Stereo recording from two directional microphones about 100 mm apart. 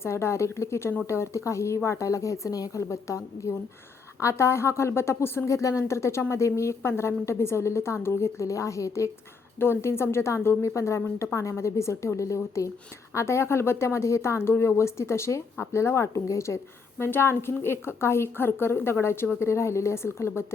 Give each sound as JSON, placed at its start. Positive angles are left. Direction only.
{"t": 0.0, "sound": "speech", "side_deg": 25}